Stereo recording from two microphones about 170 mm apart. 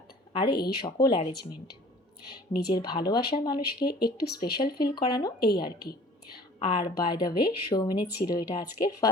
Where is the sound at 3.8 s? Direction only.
65° left (ahead or behind).